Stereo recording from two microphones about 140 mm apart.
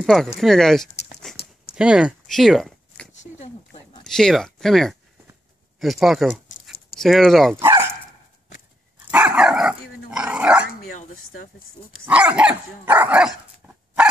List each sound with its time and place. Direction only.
0.0 s speech: centre (ahead or behind)
3.1 s a sound: 50° left (ahead or behind)
4.0 s speech: 5° left (ahead or behind)
5.8 s dog: centre (ahead or behind)
7.0 s speech: centre (ahead or behind)
9.1 s dog: 5° right (ahead or behind)
12.1 s dog: 10° right (ahead or behind)